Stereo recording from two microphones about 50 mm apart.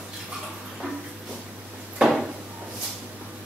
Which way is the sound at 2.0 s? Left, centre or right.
Centre.